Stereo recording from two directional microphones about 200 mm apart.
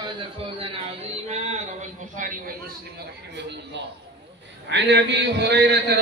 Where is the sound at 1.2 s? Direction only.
35° right (ahead or behind).